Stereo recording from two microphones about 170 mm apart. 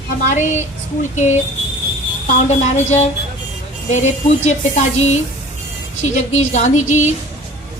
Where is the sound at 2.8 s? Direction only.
40° left (ahead or behind).